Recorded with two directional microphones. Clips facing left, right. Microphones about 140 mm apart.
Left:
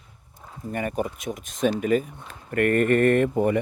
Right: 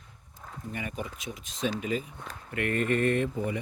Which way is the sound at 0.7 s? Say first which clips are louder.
Left 9 dB; 50° left (ahead or behind).